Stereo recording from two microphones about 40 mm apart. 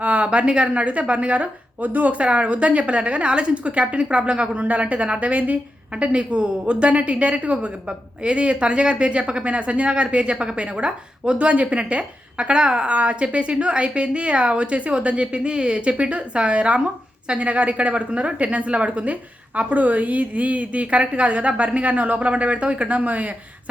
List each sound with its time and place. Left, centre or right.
0.0 s a woman's voice: right
6.0 s a woman's voice: right